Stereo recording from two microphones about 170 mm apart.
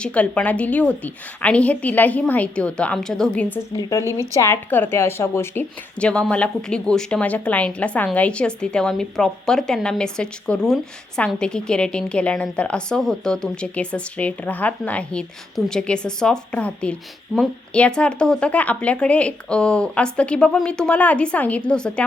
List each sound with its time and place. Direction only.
0.0 s a woman's voice: 5° left (ahead or behind)
3.8 s a woman's voice: 20° left (ahead or behind)